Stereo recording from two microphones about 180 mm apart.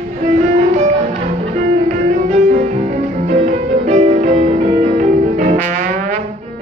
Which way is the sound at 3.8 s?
35° right (ahead or behind).